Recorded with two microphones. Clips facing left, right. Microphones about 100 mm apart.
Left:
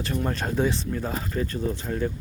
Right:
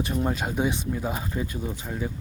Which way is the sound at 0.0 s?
15° right (ahead or behind).